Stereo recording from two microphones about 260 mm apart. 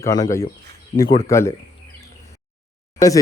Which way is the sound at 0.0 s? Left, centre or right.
Centre.